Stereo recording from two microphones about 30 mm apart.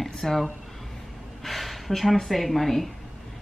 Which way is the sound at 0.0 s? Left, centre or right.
Centre.